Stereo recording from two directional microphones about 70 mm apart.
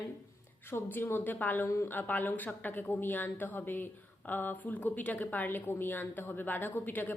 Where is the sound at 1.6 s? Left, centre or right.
Left.